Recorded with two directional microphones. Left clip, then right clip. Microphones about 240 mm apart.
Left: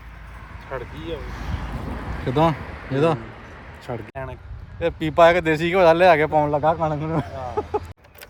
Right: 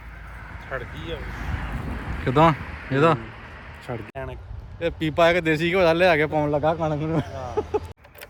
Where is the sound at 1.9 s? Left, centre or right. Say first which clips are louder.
Left 1 dB; left.